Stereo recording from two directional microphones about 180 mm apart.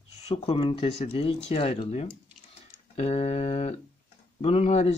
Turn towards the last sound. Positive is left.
turn(degrees=35)  # may be behind; listen again after turning